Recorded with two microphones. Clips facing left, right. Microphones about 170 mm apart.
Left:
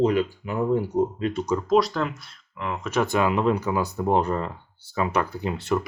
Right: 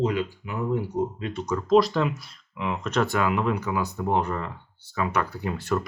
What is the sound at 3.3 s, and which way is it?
Speech, 30° left (ahead or behind).